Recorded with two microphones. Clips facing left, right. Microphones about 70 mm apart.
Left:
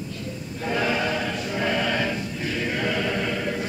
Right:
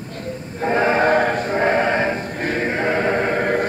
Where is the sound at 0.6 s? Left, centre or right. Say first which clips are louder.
Right 8 dB; right.